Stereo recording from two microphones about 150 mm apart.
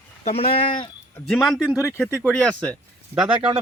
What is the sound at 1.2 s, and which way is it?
Speech, centre (ahead or behind).